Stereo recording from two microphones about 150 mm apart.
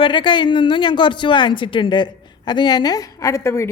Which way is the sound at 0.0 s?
30° left (ahead or behind).